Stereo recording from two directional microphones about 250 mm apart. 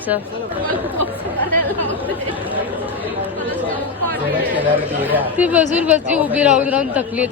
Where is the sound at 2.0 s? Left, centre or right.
Centre.